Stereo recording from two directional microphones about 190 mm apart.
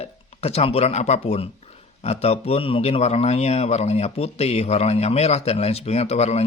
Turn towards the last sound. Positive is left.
turn(degrees=35)  # may be behind; listen again after turning